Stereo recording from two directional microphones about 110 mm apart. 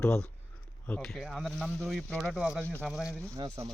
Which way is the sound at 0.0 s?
10° left (ahead or behind).